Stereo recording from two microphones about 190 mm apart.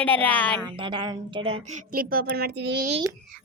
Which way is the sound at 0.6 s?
25° right (ahead or behind).